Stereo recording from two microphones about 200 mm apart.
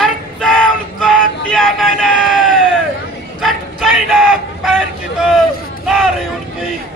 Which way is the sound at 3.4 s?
Centre (ahead or behind).